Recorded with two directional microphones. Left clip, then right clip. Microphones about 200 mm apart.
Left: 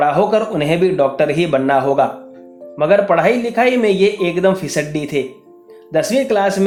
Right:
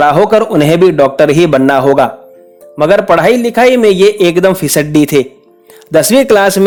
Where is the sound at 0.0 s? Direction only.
50° right (ahead or behind).